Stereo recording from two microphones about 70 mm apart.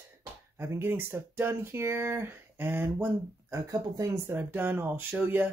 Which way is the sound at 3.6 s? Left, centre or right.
Right.